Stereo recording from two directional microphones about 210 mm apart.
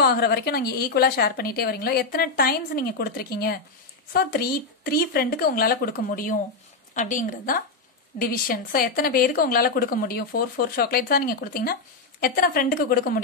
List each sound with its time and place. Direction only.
0.0 s a woman's voice: 50° left (ahead or behind)